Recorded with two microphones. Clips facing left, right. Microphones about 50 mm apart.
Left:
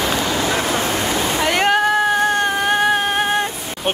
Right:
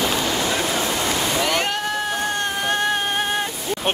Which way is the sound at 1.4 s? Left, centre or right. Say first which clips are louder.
Left 5 dB; left.